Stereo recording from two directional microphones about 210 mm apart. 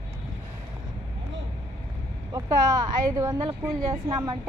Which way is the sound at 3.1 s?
20° right (ahead or behind).